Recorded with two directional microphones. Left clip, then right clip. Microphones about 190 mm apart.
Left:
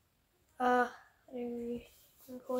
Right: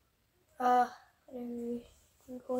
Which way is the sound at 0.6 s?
10° left (ahead or behind).